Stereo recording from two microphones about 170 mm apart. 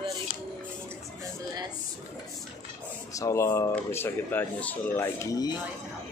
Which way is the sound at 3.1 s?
20° left (ahead or behind).